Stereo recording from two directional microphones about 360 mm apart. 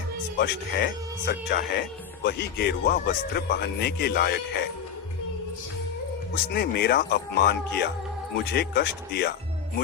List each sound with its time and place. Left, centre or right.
0.3 s speech: left
6.3 s speech: left